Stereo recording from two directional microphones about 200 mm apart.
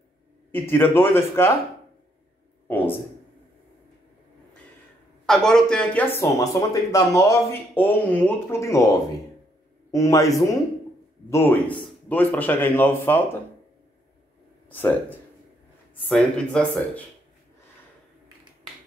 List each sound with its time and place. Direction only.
0.7 s speech: 10° left (ahead or behind)
2.7 s speech: 10° left (ahead or behind)
5.2 s a man's voice: 5° left (ahead or behind)
14.7 s speech: 10° left (ahead or behind)